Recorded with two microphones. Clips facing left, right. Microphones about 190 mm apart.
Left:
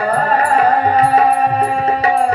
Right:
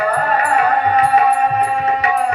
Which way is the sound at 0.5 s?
35° left (ahead or behind).